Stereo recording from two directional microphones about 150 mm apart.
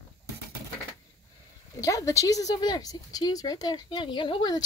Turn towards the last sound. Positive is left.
turn(degrees=30)  # may be behind; listen again after turning